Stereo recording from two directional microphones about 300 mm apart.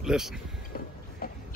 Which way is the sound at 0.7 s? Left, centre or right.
Left.